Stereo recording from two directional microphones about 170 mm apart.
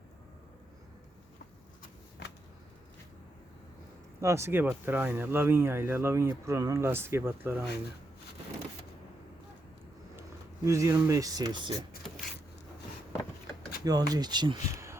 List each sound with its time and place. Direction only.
4.2 s speech: 15° right (ahead or behind)
10.2 s speech: 15° right (ahead or behind)
12.0 s a sound: centre (ahead or behind)
13.8 s speech: 20° right (ahead or behind)